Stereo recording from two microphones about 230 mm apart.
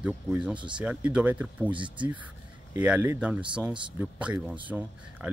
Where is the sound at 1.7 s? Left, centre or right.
Right.